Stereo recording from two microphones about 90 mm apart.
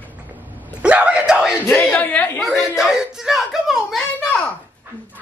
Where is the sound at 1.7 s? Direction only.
15° left (ahead or behind).